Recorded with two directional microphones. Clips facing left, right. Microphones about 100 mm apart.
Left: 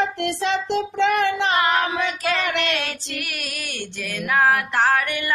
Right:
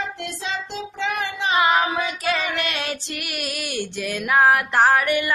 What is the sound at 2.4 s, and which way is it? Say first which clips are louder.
Child singing: left 2 dB; 85° left.